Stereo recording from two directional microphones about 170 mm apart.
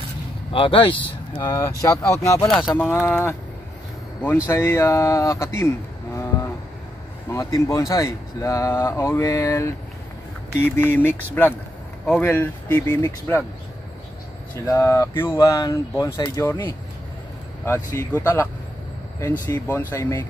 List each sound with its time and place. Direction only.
0.5 s speech: 30° left (ahead or behind)
1.4 s speech: 20° left (ahead or behind)
2.4 s speech: centre (ahead or behind)
4.5 s speech: 15° left (ahead or behind)
6.1 s a sound: 15° left (ahead or behind)
7.2 s speech: 15° left (ahead or behind)
14.7 s speech: 15° left (ahead or behind)
19.5 s speech: 15° left (ahead or behind)